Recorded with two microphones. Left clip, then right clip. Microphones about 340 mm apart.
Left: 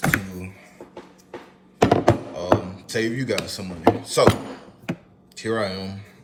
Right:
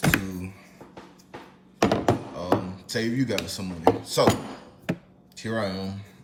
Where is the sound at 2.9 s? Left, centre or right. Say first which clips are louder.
Left 3 dB; left.